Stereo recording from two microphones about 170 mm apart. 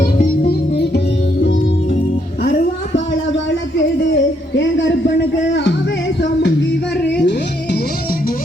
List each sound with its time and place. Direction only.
0.0 s music: 60° left (ahead or behind); by 2.0 s 85° left
2.4 s a sound: 45° left (ahead or behind)
4.1 s speech: 90° left
6.2 s music: 90° left